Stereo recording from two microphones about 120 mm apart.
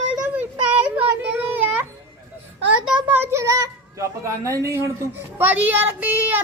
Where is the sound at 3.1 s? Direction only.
20° right (ahead or behind).